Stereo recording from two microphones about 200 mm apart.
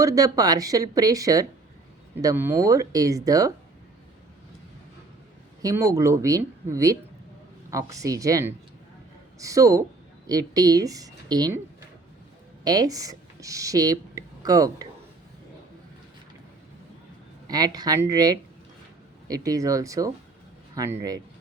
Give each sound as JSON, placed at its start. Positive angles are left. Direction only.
{"t": 0.0, "sound": "speech", "side_deg": -15}
{"t": 5.6, "sound": "speech", "side_deg": -15}
{"t": 12.6, "sound": "speech", "side_deg": -20}
{"t": 17.5, "sound": "speech", "side_deg": -20}